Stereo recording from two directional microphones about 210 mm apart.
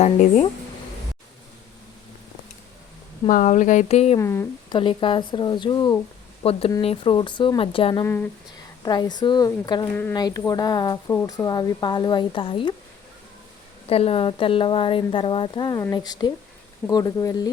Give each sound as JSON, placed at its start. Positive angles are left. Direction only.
{"t": 0.0, "sound": "speech", "side_deg": 30}
{"t": 3.2, "sound": "speech", "side_deg": 35}
{"t": 4.2, "sound": "speech", "side_deg": 15}
{"t": 4.8, "sound": "speech", "side_deg": 25}
{"t": 9.9, "sound": "speech", "side_deg": 10}
{"t": 13.8, "sound": "speech", "side_deg": 25}